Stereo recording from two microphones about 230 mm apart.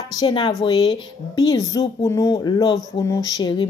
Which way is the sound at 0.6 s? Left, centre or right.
Centre.